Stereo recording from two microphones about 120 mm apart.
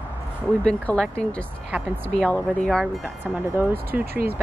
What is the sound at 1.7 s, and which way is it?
Speech, 15° right (ahead or behind).